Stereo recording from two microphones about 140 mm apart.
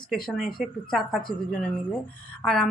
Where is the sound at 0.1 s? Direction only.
Centre (ahead or behind).